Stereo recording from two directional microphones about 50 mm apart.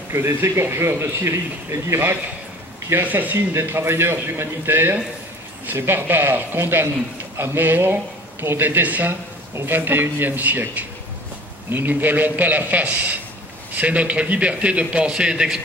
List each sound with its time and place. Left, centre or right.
0.1 s a man's voice: right
2.9 s a man's voice: right
3.6 s speech: right
11.7 s a man's voice: right; by 15.4 s centre